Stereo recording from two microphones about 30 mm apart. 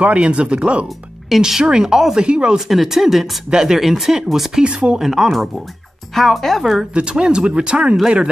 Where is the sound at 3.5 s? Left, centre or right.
Right.